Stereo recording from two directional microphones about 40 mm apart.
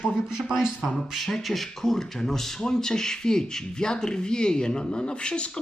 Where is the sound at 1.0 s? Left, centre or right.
Centre.